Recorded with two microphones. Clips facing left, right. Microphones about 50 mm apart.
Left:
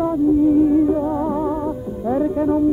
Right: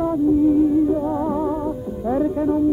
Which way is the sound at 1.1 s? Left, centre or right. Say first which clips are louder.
Left 1 dB; centre.